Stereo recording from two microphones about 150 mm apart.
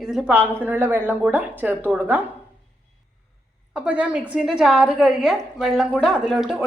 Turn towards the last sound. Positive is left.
turn(degrees=0)  # may be behind; listen again after turning